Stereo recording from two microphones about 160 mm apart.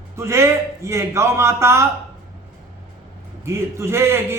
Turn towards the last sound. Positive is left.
turn(degrees=-15)  # may be behind; listen again after turning